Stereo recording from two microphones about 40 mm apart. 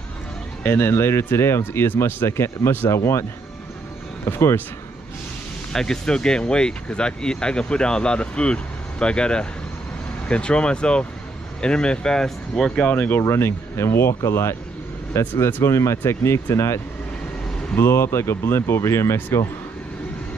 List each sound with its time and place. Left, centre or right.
0.7 s speech: left
5.7 s speech: centre
12.9 s speech: left
17.7 s speech: left